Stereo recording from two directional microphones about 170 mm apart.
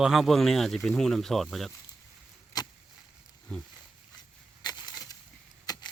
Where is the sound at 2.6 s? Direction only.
25° left (ahead or behind).